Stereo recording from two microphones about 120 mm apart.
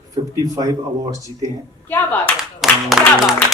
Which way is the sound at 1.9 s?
15° left (ahead or behind).